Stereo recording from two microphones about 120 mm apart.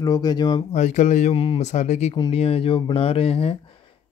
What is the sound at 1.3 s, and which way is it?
Speech, 50° left (ahead or behind).